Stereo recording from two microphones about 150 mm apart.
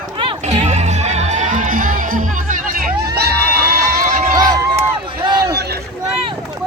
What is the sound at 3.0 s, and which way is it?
Crowd, 90° right.